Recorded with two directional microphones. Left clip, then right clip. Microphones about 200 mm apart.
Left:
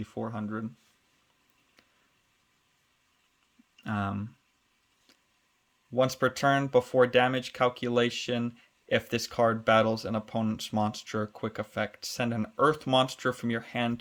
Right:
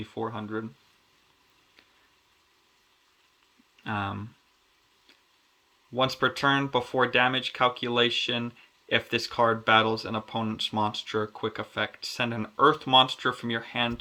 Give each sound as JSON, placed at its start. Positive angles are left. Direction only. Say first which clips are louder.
{"t": 0.0, "sound": "speech", "louder": "right 3 dB", "side_deg": 45}
{"t": 3.8, "sound": "speech", "louder": "right 2 dB", "side_deg": 45}
{"t": 5.9, "sound": "speech", "louder": "right 1 dB", "side_deg": 45}